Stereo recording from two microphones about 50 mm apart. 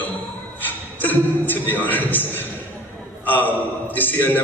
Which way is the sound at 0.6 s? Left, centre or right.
Left.